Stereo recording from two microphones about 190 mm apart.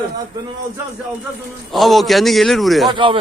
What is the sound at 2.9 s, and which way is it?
Speech, 25° right (ahead or behind).